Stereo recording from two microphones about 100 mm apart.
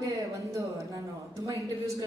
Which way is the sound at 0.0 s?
35° right (ahead or behind).